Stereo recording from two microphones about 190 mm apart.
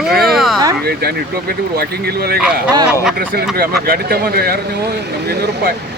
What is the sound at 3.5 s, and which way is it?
Speech, 55° right (ahead or behind).